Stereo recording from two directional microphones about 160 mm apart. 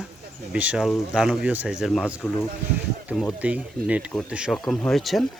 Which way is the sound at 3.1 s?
5° right (ahead or behind).